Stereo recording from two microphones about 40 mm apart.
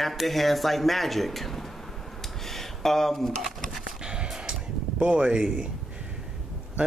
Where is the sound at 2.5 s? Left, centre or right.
Centre.